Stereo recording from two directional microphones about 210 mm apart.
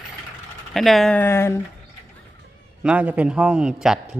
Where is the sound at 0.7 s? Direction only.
Centre (ahead or behind).